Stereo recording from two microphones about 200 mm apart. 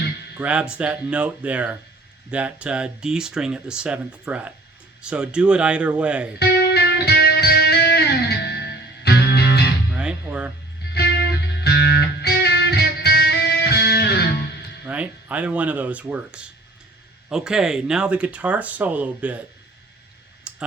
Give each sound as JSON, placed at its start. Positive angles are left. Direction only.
{"t": 0.3, "sound": "speech", "side_deg": -5}
{"t": 6.4, "sound": "music", "side_deg": 55}
{"t": 9.9, "sound": "music", "side_deg": -5}
{"t": 10.8, "sound": "music", "side_deg": 55}
{"t": 14.8, "sound": "speech", "side_deg": -5}
{"t": 20.5, "sound": "clicking", "side_deg": -5}